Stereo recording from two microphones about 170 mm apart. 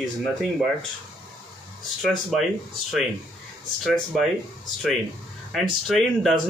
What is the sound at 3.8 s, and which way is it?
Speech, centre (ahead or behind).